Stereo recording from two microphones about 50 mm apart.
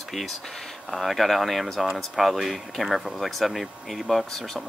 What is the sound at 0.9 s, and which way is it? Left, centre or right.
Speech, centre.